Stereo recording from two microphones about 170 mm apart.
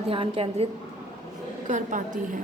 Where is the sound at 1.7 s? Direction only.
50° right (ahead or behind).